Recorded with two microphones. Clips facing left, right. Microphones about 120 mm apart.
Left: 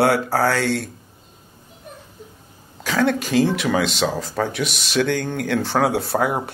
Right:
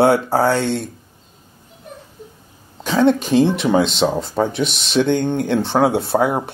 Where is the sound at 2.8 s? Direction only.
25° right (ahead or behind).